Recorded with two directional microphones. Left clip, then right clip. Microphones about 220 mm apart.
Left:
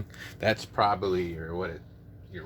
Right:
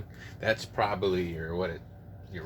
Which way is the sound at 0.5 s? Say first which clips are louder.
Left 4 dB; 30° left (ahead or behind).